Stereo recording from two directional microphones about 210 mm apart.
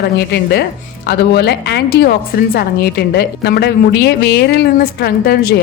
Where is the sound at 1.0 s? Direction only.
50° left (ahead or behind).